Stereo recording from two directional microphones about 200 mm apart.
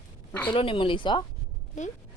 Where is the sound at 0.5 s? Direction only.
25° left (ahead or behind).